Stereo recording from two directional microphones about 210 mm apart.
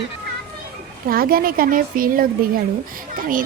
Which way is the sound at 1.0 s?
45° right (ahead or behind).